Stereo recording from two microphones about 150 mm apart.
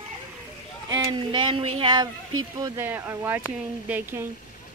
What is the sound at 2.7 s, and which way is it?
Speech, 15° right (ahead or behind).